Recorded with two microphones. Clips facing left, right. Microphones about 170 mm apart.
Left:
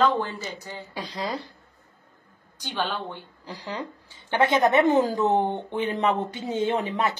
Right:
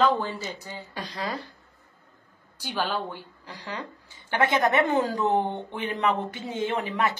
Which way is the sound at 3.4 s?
20° left (ahead or behind).